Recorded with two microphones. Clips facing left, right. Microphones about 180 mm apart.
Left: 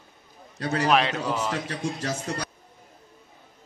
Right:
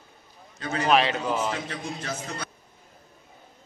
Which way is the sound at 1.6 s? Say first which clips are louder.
Left 4 dB; 40° left (ahead or behind).